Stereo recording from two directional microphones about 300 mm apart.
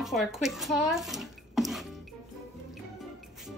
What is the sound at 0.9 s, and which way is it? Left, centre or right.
Bathtub, centre.